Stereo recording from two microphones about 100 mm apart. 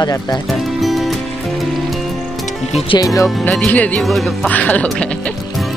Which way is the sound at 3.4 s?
10° left (ahead or behind).